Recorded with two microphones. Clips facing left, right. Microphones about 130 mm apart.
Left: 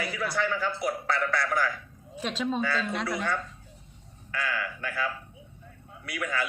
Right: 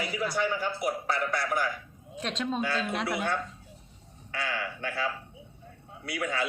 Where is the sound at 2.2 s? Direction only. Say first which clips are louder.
Left 2 dB; 5° left (ahead or behind).